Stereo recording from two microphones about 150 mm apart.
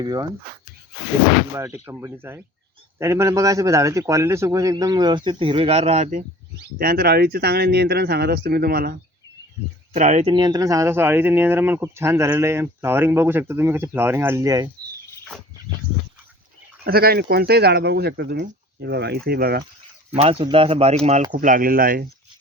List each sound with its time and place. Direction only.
0.0 s speech: 25° right (ahead or behind)
1.5 s speech: 15° right (ahead or behind); by 6.2 s 50° right (ahead or behind)
6.7 s speech: 80° right
9.9 s speech: 50° right (ahead or behind)
10.3 s speech: 25° right (ahead or behind)
16.8 s speech: 90° right
20.4 s speech: 35° right (ahead or behind)
21.3 s speech: 65° right (ahead or behind)